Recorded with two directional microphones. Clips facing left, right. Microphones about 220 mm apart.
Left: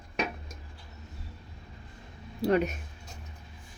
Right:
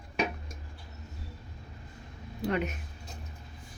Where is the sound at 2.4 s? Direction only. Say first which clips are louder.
Left 5 dB; 35° left (ahead or behind).